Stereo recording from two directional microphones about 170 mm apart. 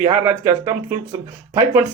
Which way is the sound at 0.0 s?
20° right (ahead or behind).